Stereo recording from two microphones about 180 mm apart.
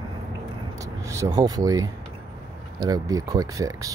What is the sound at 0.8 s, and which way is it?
Speech, 15° right (ahead or behind).